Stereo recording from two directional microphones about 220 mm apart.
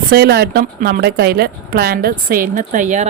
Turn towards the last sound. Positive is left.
turn(degrees=-35)  # may be behind; listen again after turning